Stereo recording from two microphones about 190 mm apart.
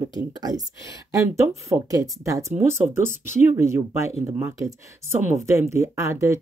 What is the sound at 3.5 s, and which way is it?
Speech, 15° right (ahead or behind).